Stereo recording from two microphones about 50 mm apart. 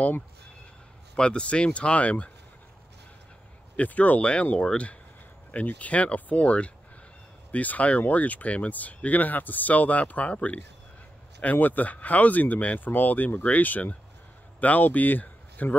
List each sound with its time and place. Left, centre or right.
1.1 s speech: centre
3.7 s speech: left